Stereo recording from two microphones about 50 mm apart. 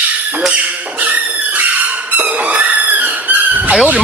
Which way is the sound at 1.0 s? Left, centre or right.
Right.